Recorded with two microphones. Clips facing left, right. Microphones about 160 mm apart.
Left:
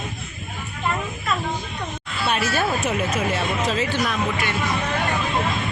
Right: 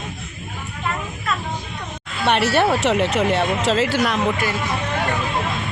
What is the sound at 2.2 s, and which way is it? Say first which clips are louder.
Speech: right 6 dB; 70° right (ahead or behind).